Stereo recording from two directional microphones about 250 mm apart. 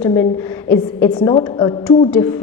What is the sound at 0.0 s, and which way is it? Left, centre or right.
A woman's voice, centre.